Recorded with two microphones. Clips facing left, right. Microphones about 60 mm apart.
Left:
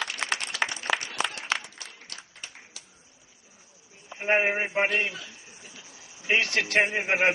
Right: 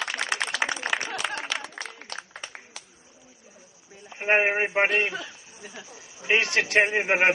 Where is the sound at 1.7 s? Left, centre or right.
Right.